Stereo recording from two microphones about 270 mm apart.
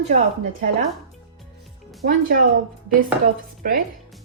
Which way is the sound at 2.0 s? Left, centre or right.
Right.